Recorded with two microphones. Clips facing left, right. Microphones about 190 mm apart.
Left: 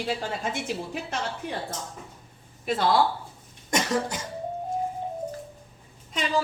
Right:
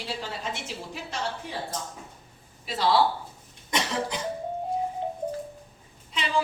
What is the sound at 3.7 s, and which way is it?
Cough, 45° left (ahead or behind).